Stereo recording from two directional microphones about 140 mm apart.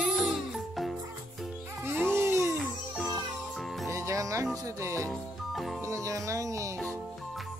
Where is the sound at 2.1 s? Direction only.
20° right (ahead or behind).